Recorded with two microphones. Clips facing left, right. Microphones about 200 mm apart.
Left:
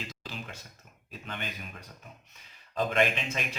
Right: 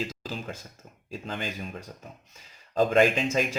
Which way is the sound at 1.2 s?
30° right (ahead or behind).